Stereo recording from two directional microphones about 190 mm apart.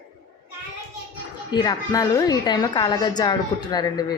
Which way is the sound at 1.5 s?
20° left (ahead or behind).